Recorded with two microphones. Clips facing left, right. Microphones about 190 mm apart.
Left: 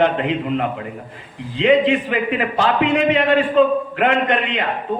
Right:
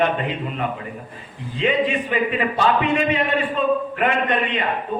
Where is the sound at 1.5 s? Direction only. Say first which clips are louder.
Left 6 dB; 90° left.